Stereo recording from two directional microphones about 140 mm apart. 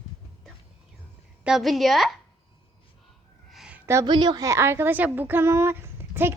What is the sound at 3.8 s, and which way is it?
Speech, 20° right (ahead or behind).